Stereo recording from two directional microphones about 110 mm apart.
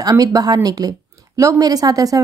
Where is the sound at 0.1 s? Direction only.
35° right (ahead or behind).